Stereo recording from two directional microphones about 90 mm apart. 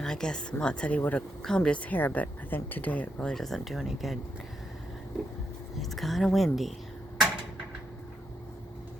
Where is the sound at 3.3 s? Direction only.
5° left (ahead or behind).